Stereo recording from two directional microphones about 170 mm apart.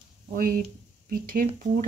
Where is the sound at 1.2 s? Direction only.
55° right (ahead or behind).